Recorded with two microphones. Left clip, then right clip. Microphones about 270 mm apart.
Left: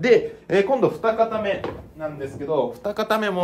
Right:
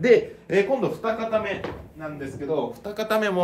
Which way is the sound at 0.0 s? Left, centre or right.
Centre.